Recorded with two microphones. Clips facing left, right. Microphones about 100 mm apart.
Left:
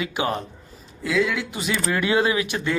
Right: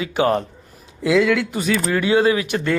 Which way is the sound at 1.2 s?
65° right (ahead or behind).